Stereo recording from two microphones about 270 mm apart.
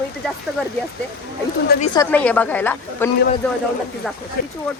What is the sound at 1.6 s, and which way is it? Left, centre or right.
Speech, left.